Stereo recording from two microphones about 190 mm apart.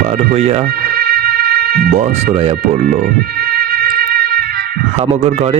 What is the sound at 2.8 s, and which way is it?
Music, 50° right (ahead or behind).